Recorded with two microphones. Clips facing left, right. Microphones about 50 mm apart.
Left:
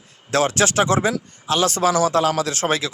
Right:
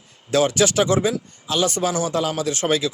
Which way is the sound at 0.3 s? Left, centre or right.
Left.